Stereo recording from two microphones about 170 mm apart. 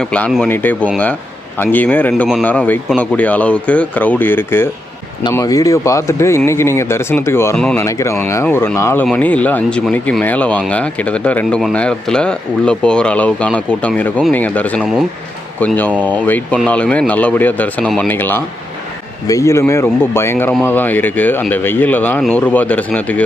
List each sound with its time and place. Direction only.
0.0 s speech: 5° left (ahead or behind)
7.9 s speech: 15° left (ahead or behind)